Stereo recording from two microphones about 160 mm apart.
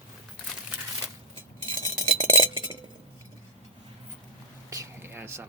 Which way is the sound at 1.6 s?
30° right (ahead or behind).